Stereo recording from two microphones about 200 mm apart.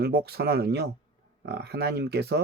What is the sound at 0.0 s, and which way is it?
Speech, 50° right (ahead or behind).